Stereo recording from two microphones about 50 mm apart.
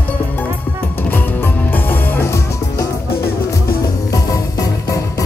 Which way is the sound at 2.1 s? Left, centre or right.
Left.